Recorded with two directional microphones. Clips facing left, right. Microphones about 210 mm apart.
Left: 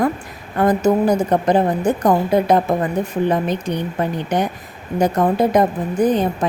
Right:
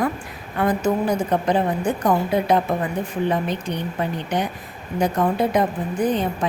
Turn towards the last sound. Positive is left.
turn(degrees=45)  # may be behind; listen again after turning